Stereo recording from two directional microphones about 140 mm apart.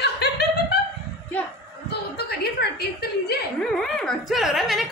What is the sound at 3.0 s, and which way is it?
Speech, 90° left.